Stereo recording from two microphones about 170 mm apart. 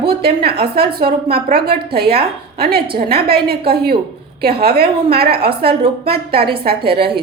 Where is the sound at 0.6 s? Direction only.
65° right (ahead or behind).